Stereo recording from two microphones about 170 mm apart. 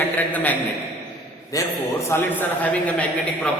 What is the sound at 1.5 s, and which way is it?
A man's voice, 20° left (ahead or behind).